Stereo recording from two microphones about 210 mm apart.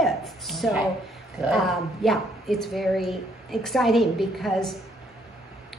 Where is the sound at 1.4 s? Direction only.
Centre (ahead or behind).